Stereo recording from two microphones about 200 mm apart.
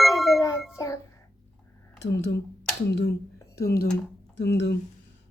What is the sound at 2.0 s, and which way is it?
Speech, 60° left (ahead or behind).